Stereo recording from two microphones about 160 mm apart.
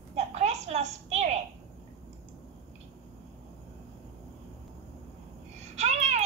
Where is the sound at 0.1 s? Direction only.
45° right (ahead or behind).